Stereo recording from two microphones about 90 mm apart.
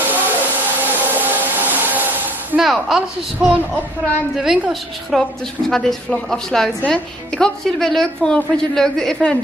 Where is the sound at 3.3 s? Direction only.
15° right (ahead or behind).